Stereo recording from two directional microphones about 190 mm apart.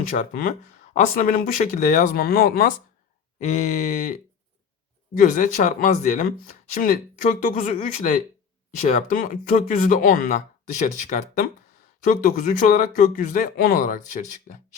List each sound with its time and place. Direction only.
0.1 s speech: 45° left (ahead or behind)
3.3 s speech: 35° left (ahead or behind)